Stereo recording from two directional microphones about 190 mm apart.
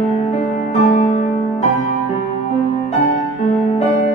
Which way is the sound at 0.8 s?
35° left (ahead or behind).